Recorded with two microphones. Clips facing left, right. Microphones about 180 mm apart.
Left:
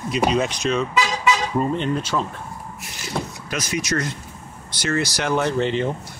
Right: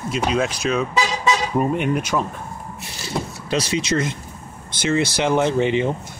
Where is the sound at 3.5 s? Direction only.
30° right (ahead or behind).